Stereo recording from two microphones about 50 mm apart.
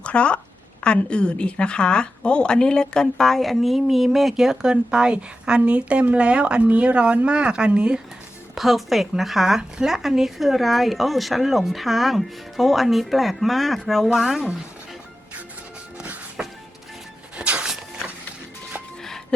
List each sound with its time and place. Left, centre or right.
0.0 s speech: left; by 8.0 s centre
8.5 s speech: centre
16.4 s music: right